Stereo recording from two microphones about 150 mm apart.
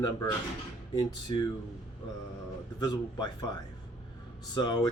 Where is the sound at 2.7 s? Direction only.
30° left (ahead or behind).